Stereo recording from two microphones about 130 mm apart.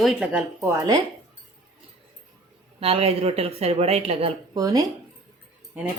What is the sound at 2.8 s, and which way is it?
Speech, 50° right (ahead or behind).